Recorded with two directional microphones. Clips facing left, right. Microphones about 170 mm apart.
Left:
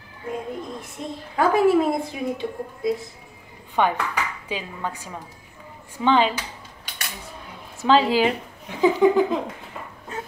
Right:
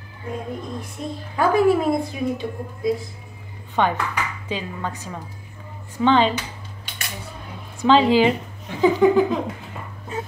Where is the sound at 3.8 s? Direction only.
10° left (ahead or behind).